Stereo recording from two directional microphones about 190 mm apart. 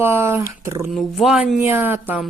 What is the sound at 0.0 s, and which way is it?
Speech, 15° right (ahead or behind).